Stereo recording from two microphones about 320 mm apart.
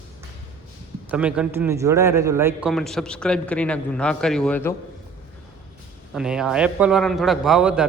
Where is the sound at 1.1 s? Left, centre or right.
Centre.